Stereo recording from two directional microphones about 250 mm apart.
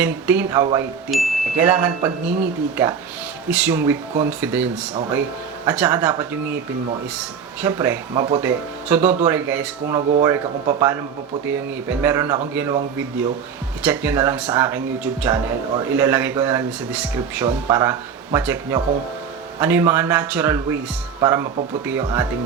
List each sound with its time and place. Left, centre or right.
0.0 s speech: centre
1.1 s speech: centre
10.0 s speech: right
10.2 s speech: centre
13.8 s speech: centre